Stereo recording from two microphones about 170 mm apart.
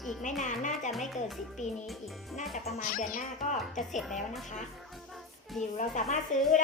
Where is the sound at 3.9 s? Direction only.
Centre (ahead or behind).